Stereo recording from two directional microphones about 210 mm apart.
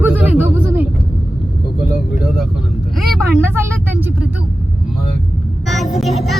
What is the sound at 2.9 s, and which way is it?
Vehicle, centre (ahead or behind).